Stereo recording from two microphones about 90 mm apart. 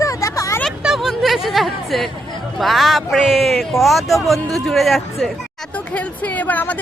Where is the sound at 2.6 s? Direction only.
Centre (ahead or behind).